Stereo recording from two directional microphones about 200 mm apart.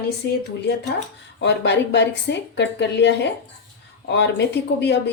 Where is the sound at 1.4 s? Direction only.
60° left (ahead or behind).